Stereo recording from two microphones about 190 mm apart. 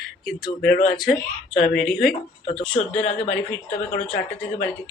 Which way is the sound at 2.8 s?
45° left (ahead or behind).